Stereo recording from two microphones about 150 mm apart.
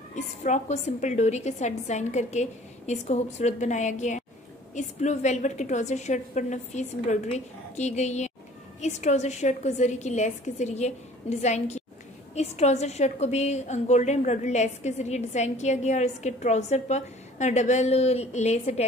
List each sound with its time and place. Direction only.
0.1 s a woman's voice: 50° left (ahead or behind)